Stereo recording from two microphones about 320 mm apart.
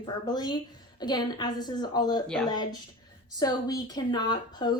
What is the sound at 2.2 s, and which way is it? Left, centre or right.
Speech, centre.